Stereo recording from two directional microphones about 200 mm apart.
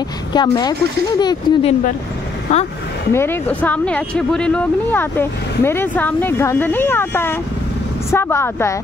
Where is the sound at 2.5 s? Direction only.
35° left (ahead or behind).